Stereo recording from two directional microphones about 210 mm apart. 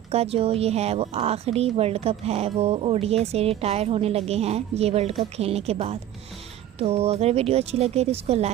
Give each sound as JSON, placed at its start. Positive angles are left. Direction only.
{"t": 0.1, "sound": "speech", "side_deg": -30}